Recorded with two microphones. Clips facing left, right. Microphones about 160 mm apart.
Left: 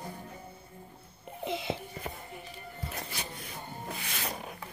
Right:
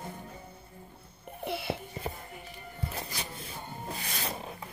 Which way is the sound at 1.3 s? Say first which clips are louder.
Even; 20° left (ahead or behind).